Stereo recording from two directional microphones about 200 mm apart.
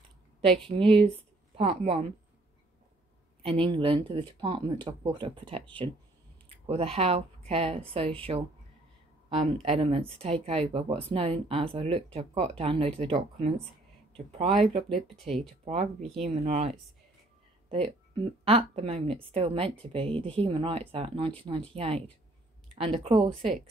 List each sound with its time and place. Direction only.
0.7 s speech: 25° right (ahead or behind)
3.4 s speech: 30° right (ahead or behind)
6.6 s speech: 30° right (ahead or behind)